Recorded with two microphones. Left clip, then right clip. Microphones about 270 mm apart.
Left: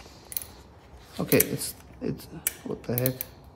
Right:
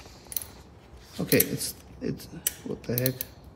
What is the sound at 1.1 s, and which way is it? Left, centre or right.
Speech, centre.